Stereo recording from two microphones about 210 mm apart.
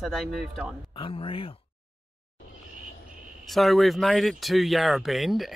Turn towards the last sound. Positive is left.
turn(degrees=0)  # may be behind; listen again after turning